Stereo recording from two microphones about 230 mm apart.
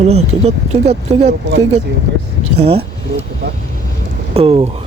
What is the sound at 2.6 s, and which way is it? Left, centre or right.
Speech, right.